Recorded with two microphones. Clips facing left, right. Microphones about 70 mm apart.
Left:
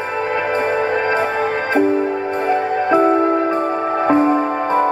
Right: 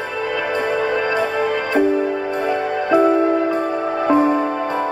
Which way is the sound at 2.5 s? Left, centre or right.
Left.